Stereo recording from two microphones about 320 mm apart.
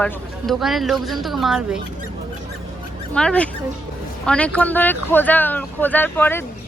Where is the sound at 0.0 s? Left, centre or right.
Centre.